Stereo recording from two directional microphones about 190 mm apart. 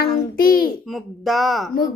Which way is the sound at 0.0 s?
50° left (ahead or behind).